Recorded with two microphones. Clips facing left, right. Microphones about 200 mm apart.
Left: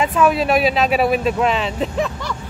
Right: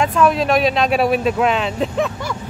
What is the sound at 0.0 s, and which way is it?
Speech, 5° left (ahead or behind).